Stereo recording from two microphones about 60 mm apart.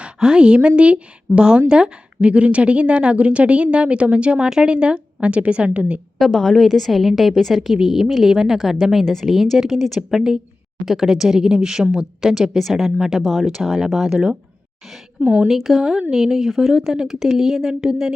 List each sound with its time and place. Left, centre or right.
0.0 s a woman's voice: centre
6.1 s a woman's voice: centre
15.2 s speech: right
15.4 s a woman's voice: centre